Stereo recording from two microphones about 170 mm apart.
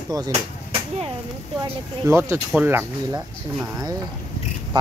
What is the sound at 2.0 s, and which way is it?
Speech, 15° right (ahead or behind).